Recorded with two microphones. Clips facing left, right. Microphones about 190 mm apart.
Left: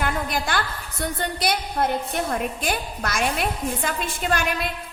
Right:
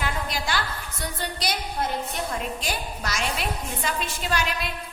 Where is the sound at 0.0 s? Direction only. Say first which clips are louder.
Left 4 dB; 55° left (ahead or behind).